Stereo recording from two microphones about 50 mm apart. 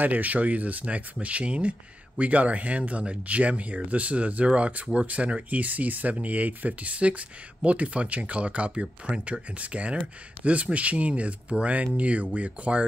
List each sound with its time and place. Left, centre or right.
0.0 s speech: right